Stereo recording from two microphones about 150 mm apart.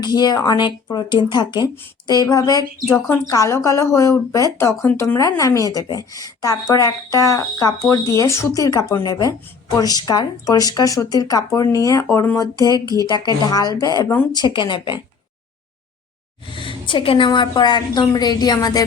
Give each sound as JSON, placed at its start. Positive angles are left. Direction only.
{"t": 0.0, "sound": "speech", "side_deg": 25}
{"t": 16.5, "sound": "speech", "side_deg": 35}